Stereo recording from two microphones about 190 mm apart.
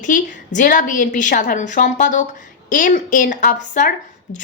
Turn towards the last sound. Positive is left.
turn(degrees=45)  # may be behind; listen again after turning